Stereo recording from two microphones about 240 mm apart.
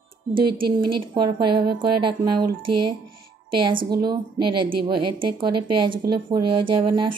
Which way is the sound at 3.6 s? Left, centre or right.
Centre.